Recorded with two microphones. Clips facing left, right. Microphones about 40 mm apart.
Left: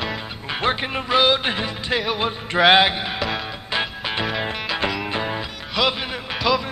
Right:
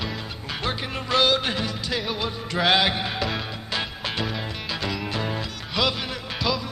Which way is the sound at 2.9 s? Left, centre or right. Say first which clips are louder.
Left 2 dB; centre.